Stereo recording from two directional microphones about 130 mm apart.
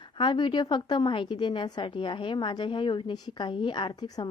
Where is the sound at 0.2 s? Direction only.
35° left (ahead or behind).